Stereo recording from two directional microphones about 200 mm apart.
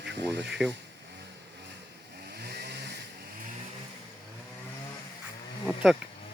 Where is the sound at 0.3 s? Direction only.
60° right (ahead or behind).